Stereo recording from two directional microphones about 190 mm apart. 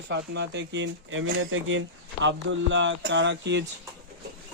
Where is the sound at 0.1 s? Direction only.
65° right (ahead or behind); by 1.8 s 90° right.